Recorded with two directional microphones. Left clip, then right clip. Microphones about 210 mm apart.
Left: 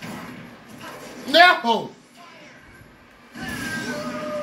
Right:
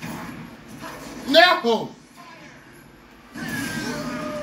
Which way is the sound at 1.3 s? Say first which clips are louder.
Left 1 dB; 30° left (ahead or behind).